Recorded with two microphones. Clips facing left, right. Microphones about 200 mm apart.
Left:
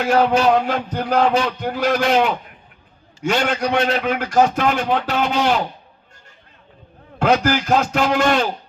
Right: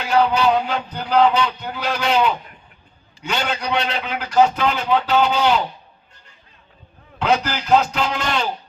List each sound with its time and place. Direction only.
0.0 s a man's voice: 50° left (ahead or behind)
7.2 s a man's voice: 50° left (ahead or behind)